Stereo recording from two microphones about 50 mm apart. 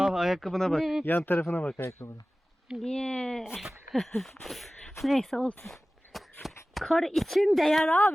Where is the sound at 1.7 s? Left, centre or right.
Left.